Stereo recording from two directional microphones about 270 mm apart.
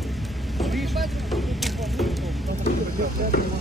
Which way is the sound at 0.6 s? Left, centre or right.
Centre.